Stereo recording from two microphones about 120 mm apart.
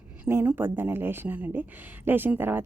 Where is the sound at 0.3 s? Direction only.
20° right (ahead or behind).